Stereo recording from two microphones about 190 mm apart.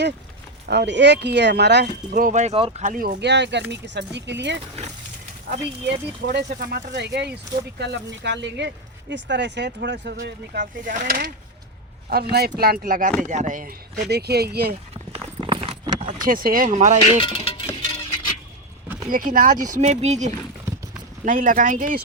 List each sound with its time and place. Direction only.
0.7 s speech: 65° right (ahead or behind)
5.9 s speech: 60° right (ahead or behind)
12.5 s speech: 50° right (ahead or behind)
15.1 s clip-clop: 30° right (ahead or behind)
16.2 s speech: 50° right (ahead or behind)
17.2 s music: 30° left (ahead or behind)
17.7 s a sound: 20° left (ahead or behind)
19.1 s speech: 45° right (ahead or behind)